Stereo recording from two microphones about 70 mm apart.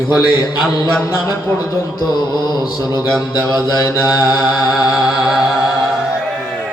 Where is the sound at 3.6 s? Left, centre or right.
Left.